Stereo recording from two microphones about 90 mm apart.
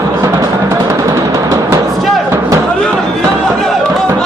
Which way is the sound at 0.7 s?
35° right (ahead or behind).